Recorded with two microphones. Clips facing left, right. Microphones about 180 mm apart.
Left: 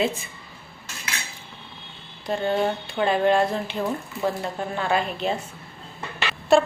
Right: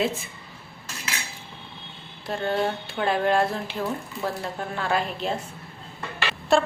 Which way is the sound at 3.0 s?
Centre (ahead or behind).